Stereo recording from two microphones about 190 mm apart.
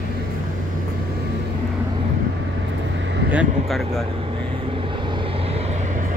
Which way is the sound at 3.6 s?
Centre (ahead or behind).